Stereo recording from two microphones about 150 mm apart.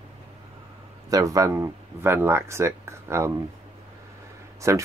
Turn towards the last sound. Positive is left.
turn(degrees=-20)  # may be behind; listen again after turning